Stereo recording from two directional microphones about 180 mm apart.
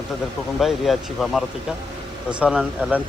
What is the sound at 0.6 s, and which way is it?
Speech, centre (ahead or behind).